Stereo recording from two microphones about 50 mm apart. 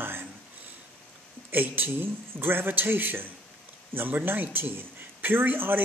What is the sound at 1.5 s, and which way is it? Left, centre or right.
Speech, right.